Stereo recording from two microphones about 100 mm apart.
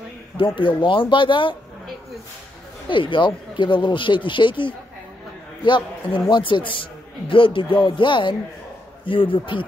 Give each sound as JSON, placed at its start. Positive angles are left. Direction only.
{"t": 0.6, "sound": "speech", "side_deg": 55}
{"t": 2.9, "sound": "a man's voice", "side_deg": 55}